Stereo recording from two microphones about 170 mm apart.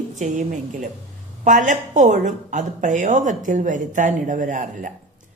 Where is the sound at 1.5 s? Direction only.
45° right (ahead or behind).